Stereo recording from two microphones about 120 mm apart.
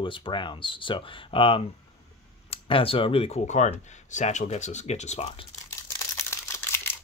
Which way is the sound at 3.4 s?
80° left.